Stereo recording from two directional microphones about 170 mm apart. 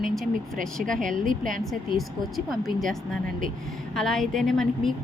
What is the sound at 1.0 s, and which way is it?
Speech, 50° right (ahead or behind).